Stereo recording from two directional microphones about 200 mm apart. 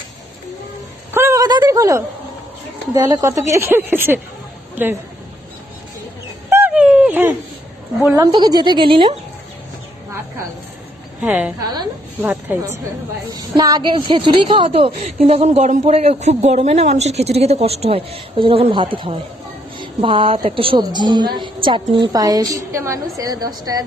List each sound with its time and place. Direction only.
1.1 s a sound: 15° right (ahead or behind)
2.9 s a woman's voice: 15° right (ahead or behind)
4.7 s a sound: 10° right (ahead or behind)
6.5 s dog: 10° right (ahead or behind)
8.1 s a woman's voice: 20° right (ahead or behind)
11.2 s a woman's voice: 5° right (ahead or behind)